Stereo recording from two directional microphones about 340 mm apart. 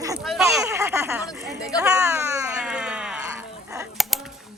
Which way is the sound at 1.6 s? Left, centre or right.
Centre.